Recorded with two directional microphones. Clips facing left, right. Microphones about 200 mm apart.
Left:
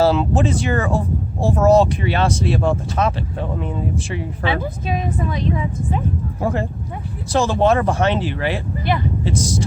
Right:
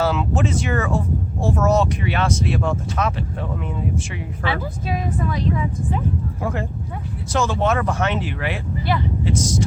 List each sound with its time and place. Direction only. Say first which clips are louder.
0.0 s speech: left 5 dB; 30° left (ahead or behind)
4.4 s a woman's voice: left 2 dB; 20° left (ahead or behind)
6.4 s speech: left 6 dB; 35° left (ahead or behind)
8.9 s a woman's voice: left 2 dB; 20° left (ahead or behind)
9.2 s speech: even; 30° left (ahead or behind)